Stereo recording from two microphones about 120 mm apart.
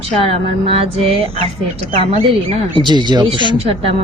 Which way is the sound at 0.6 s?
50° right (ahead or behind).